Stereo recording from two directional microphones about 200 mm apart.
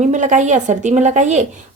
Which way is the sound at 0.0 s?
35° right (ahead or behind).